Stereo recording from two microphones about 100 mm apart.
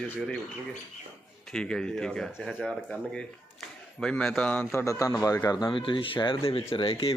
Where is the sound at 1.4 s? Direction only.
5° left (ahead or behind).